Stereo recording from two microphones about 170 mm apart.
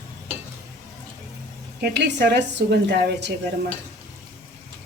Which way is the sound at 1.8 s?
85° right.